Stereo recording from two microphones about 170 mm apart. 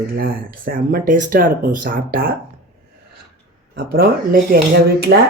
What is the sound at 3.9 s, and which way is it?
Speech, 65° right (ahead or behind).